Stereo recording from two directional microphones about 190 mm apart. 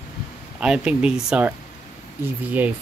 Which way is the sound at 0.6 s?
5° right (ahead or behind).